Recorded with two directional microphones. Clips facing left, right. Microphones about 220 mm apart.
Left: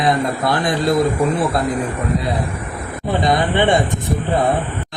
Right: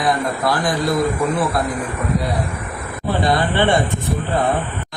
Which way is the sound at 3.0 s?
20° left (ahead or behind).